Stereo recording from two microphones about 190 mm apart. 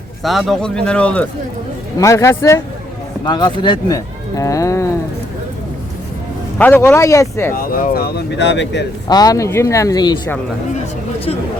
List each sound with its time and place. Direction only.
0.2 s speech: centre (ahead or behind); by 4.9 s 15° left (ahead or behind)
6.6 s speech: 10° left (ahead or behind)
7.5 s speech: 50° left (ahead or behind); by 8.9 s 65° left (ahead or behind)
9.0 s speech: 20° left (ahead or behind)